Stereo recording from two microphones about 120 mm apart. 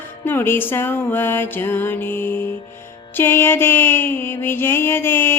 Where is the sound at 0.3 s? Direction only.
15° left (ahead or behind).